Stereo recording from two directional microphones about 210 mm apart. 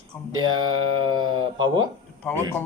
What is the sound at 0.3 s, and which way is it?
Speech, 20° right (ahead or behind).